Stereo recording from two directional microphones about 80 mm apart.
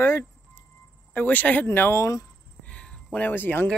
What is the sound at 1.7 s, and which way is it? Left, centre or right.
Speech, left.